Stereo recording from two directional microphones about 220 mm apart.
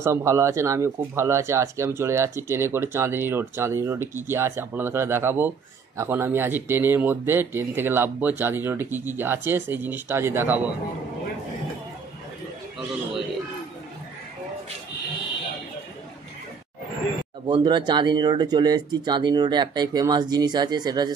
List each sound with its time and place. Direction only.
0.0 s speech: 15° right (ahead or behind)
17.5 s speech: 20° right (ahead or behind)